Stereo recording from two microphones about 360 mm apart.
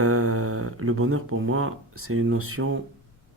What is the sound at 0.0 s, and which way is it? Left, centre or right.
Speech, right.